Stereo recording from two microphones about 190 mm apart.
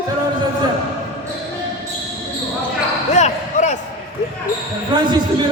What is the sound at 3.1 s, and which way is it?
Basketball bounce, 40° left (ahead or behind).